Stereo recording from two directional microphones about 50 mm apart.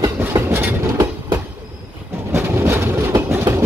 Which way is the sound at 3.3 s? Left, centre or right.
Right.